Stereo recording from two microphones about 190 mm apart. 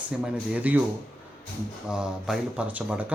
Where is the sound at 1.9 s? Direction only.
5° right (ahead or behind).